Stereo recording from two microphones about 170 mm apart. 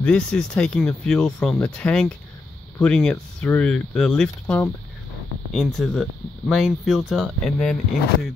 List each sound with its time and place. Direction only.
0.0 s speech: 5° left (ahead or behind)